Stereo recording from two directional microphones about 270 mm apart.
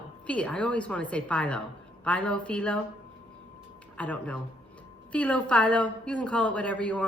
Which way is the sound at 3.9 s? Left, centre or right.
Centre.